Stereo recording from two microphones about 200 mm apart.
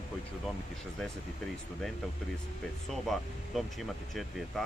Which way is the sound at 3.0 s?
Centre (ahead or behind).